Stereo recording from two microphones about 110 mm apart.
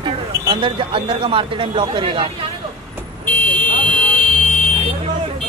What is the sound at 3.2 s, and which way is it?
Car alarm, 15° left (ahead or behind).